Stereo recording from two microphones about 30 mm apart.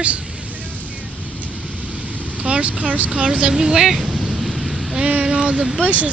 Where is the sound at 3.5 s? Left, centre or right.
Right.